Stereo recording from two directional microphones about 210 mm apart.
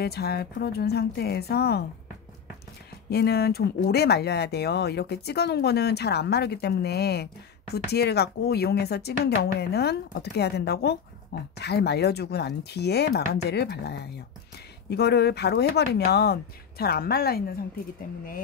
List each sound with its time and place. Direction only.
0.0 s speech: 50° left (ahead or behind)
3.1 s speech: 50° left (ahead or behind)